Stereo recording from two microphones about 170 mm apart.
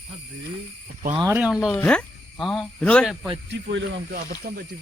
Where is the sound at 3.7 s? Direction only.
60° right (ahead or behind).